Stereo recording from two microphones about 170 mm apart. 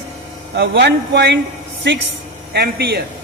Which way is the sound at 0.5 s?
90° right.